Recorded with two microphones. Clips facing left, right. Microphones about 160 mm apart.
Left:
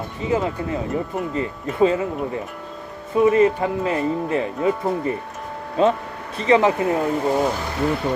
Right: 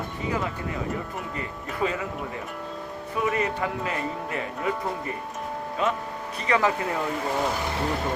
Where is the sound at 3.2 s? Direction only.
30° left (ahead or behind).